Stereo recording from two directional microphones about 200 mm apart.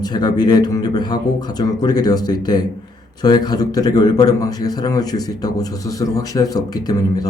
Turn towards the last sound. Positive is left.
turn(degrees=20)  # may be behind; listen again after turning